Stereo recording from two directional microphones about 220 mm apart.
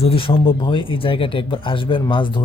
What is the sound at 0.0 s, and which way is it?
Speech, 25° left (ahead or behind).